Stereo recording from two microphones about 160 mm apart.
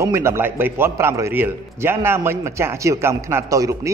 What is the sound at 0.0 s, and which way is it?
A man's voice, 20° right (ahead or behind).